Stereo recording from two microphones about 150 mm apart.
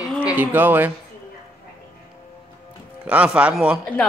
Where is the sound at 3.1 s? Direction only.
10° right (ahead or behind).